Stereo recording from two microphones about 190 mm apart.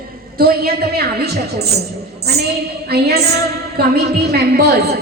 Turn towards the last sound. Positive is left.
turn(degrees=-60)  # may be behind; listen again after turning